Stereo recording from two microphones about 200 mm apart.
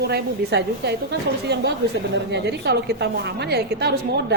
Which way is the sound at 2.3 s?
60° right (ahead or behind).